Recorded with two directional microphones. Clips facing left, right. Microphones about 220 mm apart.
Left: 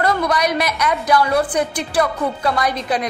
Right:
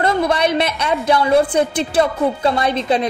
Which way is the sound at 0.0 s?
25° right (ahead or behind).